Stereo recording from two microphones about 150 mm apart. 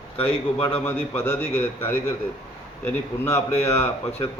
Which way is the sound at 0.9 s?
15° left (ahead or behind).